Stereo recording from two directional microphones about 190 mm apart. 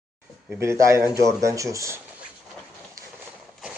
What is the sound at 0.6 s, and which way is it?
Speech, 15° right (ahead or behind).